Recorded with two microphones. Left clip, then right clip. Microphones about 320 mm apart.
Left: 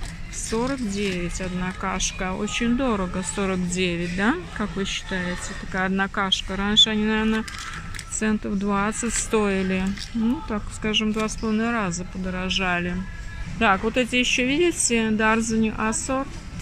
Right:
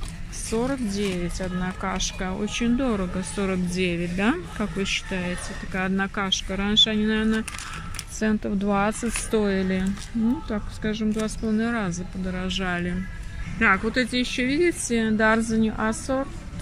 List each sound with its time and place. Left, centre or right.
0.5 s speech: centre